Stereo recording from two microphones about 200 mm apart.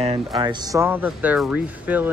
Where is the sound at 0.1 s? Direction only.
20° right (ahead or behind).